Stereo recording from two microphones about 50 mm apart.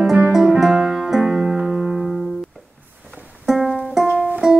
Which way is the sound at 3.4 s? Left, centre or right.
Centre.